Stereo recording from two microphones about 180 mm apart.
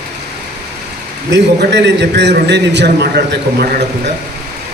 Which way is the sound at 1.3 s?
75° right (ahead or behind).